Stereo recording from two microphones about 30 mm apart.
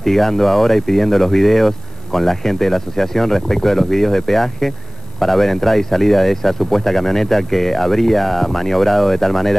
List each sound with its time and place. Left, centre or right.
0.0 s speech: centre